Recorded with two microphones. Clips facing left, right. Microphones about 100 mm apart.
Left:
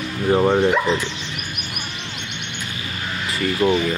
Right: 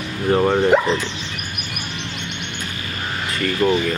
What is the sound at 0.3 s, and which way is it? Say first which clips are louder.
Speech: even; 5° left (ahead or behind).